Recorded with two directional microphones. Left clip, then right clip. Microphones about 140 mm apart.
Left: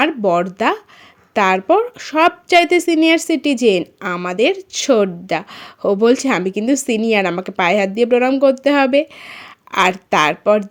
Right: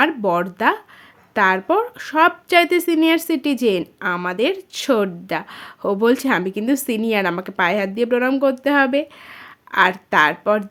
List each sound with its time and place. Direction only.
0.0 s a woman's voice: 15° left (ahead or behind)